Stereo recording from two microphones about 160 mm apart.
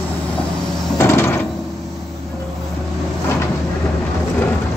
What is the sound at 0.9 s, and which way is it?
Wood, 15° left (ahead or behind).